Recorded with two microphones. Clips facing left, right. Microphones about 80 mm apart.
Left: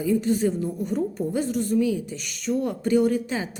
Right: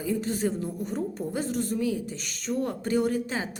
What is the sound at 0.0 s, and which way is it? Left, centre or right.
A woman's voice, right.